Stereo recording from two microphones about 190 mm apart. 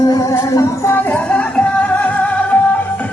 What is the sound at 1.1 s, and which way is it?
Music, 5° left (ahead or behind).